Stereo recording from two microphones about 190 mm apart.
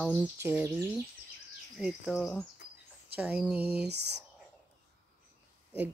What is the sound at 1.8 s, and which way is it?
Speech, centre (ahead or behind).